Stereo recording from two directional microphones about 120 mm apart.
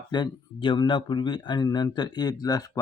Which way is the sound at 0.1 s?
40° left (ahead or behind).